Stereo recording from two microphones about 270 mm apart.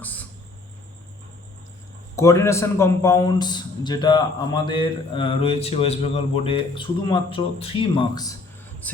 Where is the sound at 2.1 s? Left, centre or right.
Centre.